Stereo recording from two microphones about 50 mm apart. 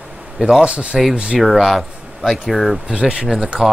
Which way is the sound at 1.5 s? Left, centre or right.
Centre.